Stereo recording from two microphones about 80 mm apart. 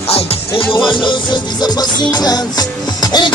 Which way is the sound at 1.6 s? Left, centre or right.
Left.